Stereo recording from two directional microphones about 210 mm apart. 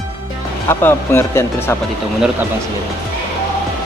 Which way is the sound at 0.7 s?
10° left (ahead or behind).